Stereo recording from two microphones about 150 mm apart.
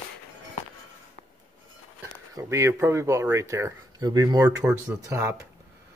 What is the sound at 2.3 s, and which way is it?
Speech, 20° right (ahead or behind).